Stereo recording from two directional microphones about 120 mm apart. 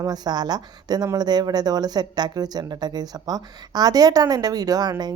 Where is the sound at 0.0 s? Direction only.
35° right (ahead or behind).